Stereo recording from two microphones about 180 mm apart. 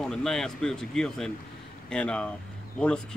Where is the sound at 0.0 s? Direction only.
5° left (ahead or behind).